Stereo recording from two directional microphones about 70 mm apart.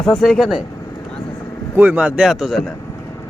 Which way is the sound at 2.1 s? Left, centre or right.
Centre.